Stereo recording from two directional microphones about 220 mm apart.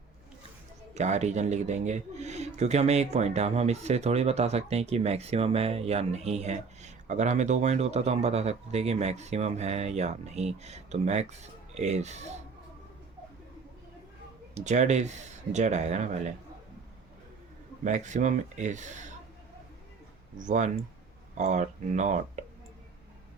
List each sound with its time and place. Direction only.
0.9 s speech: 30° right (ahead or behind)
14.5 s speech: 35° right (ahead or behind)
17.8 s speech: 35° right (ahead or behind)
20.4 s speech: 35° right (ahead or behind)